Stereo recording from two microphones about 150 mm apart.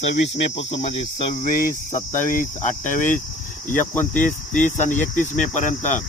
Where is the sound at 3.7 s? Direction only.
10° left (ahead or behind).